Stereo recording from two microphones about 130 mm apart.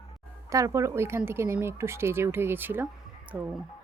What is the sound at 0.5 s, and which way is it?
Speech, 25° right (ahead or behind).